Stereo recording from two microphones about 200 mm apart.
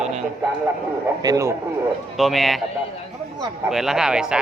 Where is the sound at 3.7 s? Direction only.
Centre (ahead or behind).